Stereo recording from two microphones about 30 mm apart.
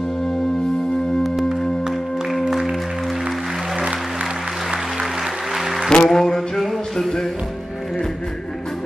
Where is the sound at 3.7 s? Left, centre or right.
Centre.